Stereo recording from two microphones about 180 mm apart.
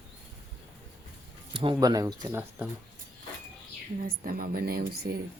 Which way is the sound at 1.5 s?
30° right (ahead or behind).